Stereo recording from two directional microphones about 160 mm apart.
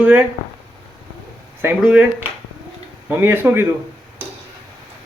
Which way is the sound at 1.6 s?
10° right (ahead or behind).